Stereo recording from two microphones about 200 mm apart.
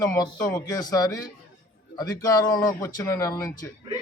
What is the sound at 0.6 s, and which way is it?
A man's voice, 20° left (ahead or behind).